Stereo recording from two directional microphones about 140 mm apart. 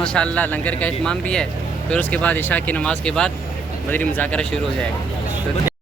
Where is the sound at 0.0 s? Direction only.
5° left (ahead or behind).